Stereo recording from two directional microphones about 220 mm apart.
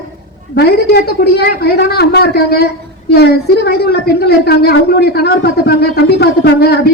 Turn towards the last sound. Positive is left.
turn(degrees=45)  # may be behind; listen again after turning